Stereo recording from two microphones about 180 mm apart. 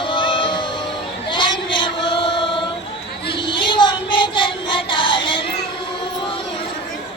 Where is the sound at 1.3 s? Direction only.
25° left (ahead or behind).